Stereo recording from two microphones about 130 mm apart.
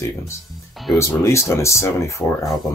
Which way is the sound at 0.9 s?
20° left (ahead or behind).